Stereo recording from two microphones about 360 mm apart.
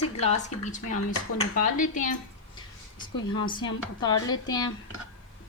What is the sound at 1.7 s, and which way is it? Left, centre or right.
A woman's voice, left.